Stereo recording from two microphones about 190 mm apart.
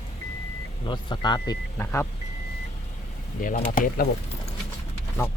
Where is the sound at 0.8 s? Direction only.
25° left (ahead or behind).